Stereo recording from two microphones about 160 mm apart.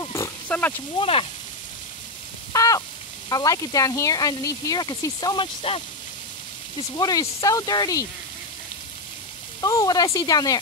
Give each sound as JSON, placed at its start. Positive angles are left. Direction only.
{"t": 0.0, "sound": "pig", "side_deg": 20}
{"t": 0.9, "sound": "speech", "side_deg": 35}
{"t": 2.5, "sound": "a sound", "side_deg": 20}
{"t": 3.3, "sound": "speech", "side_deg": 20}
{"t": 7.0, "sound": "speech", "side_deg": 25}
{"t": 9.6, "sound": "speech", "side_deg": 20}